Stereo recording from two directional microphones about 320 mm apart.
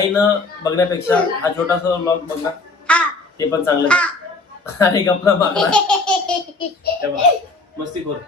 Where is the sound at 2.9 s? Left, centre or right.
Centre.